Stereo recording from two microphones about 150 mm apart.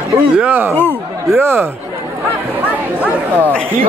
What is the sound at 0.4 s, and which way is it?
Speech, 10° right (ahead or behind).